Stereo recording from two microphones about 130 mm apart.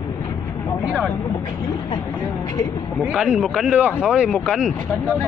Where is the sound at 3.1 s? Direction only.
5° right (ahead or behind).